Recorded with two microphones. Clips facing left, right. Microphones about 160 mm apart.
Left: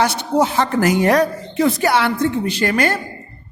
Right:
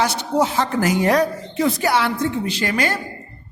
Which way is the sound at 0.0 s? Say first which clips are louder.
Left 2 dB; 60° left (ahead or behind).